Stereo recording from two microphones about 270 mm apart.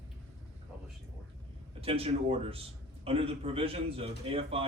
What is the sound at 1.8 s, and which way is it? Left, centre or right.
Speech, right.